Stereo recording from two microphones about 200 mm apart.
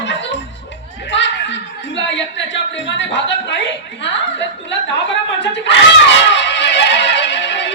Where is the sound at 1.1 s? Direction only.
65° left (ahead or behind).